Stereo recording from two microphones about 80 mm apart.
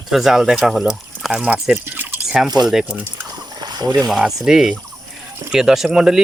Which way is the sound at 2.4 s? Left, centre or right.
Right.